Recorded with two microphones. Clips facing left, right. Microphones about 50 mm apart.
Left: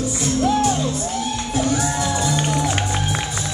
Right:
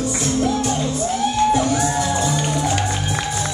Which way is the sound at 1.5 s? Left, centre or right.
Centre.